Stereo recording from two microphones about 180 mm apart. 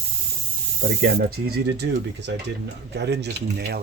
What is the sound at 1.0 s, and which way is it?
Speech, 60° right (ahead or behind).